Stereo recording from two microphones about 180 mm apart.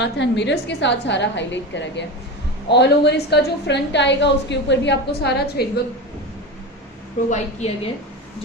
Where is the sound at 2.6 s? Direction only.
70° left (ahead or behind).